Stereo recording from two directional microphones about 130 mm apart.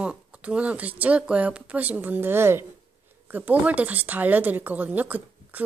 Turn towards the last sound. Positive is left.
turn(degrees=-10)  # may be behind; listen again after turning